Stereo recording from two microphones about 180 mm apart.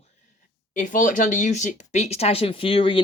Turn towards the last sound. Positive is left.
turn(degrees=30)  # may be behind; listen again after turning